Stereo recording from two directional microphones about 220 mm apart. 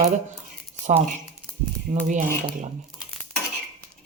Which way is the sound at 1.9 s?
35° right (ahead or behind).